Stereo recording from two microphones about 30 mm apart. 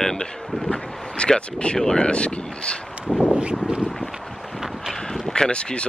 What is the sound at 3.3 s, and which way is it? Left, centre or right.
Clip-clop, right.